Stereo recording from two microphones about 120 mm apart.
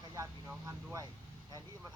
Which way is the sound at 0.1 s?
25° right (ahead or behind).